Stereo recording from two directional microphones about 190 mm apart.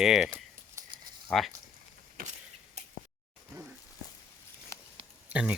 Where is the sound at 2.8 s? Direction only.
35° right (ahead or behind).